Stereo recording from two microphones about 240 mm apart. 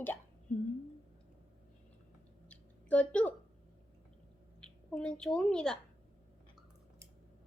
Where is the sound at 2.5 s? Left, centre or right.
Centre.